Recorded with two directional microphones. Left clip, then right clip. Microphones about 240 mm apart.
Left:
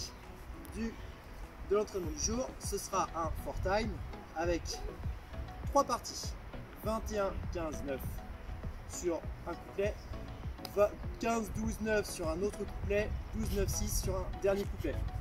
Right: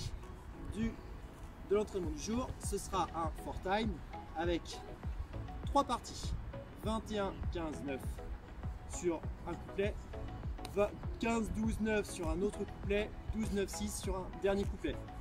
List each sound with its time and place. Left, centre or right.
1.7 s speech: centre
5.7 s speech: centre
9.0 s speech: centre